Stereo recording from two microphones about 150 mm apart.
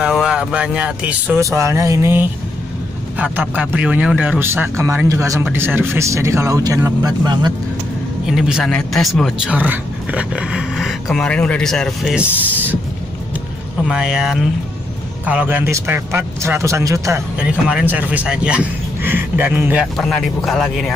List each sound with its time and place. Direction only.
0.0 s speech: 5° right (ahead or behind); by 7.5 s 25° right (ahead or behind)
8.3 s speech: 5° right (ahead or behind)
13.8 s speech: 5° right (ahead or behind); by 17.2 s 20° right (ahead or behind)
17.4 s speech: 5° right (ahead or behind)
20.0 s speech: 5° left (ahead or behind)